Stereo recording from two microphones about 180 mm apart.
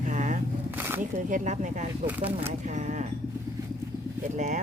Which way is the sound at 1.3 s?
40° right (ahead or behind).